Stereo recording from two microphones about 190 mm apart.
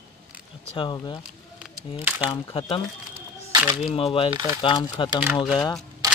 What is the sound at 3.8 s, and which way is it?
Speech, 30° left (ahead or behind).